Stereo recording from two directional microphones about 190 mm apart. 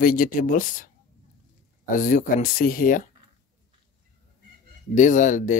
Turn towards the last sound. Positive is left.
turn(degrees=45)  # may be behind; listen again after turning